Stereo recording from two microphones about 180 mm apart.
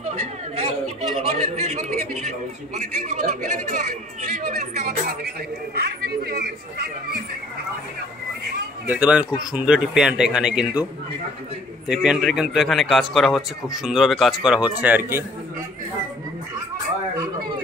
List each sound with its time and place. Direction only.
0.0 s chatter: 35° right (ahead or behind)
1.2 s a man's voice: 35° right (ahead or behind)
6.0 s a sound: 60° right (ahead or behind)
8.8 s a man's voice: 10° right (ahead or behind)
11.9 s a man's voice: 5° right (ahead or behind)